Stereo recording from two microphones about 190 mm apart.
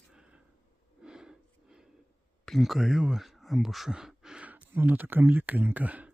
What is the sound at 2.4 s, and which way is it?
Speech, centre (ahead or behind).